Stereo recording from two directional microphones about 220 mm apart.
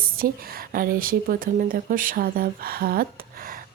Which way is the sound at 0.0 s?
40° right (ahead or behind).